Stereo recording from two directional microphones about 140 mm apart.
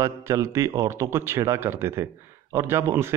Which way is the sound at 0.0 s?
20° right (ahead or behind).